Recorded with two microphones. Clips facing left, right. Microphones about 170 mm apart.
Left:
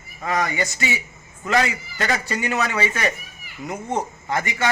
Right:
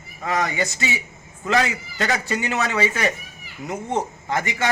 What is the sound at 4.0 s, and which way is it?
Speech, 20° right (ahead or behind).